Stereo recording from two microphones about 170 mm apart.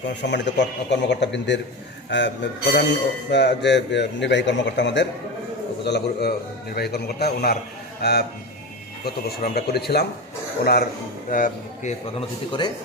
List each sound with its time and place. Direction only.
0.2 s a man's voice: 90° left
5.8 s a man's voice: 80° left
11.3 s speech: 55° left (ahead or behind)
12.5 s speech: 25° left (ahead or behind)